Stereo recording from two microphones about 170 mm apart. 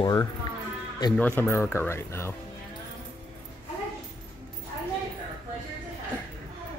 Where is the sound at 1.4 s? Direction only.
15° left (ahead or behind).